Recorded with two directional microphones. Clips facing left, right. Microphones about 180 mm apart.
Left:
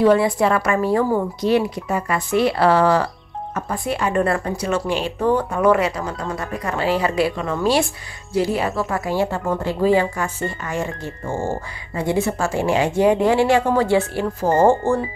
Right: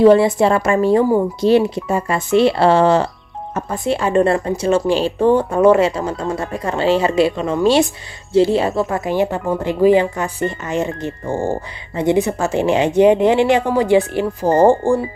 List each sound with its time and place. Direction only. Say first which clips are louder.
0.0 s speech: right 5 dB; 25° right (ahead or behind)